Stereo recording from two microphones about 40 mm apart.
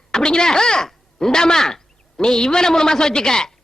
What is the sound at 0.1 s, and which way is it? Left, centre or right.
A woman's voice, centre.